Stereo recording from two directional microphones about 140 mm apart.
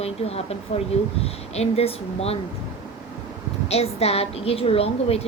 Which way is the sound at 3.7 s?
45° left (ahead or behind).